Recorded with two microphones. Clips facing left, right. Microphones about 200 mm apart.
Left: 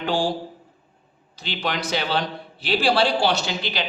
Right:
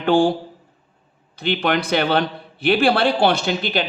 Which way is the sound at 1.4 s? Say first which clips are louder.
Right 7 dB; 55° right (ahead or behind).